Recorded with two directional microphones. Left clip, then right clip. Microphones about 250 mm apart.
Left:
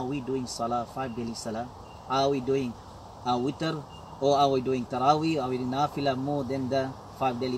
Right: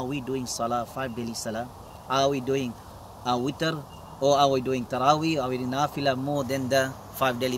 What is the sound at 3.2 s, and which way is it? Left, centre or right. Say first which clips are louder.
Speech: right 1 dB; right.